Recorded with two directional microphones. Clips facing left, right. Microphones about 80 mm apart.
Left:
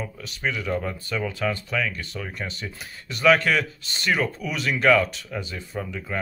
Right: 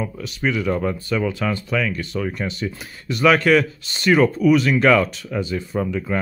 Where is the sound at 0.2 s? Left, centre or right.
Centre.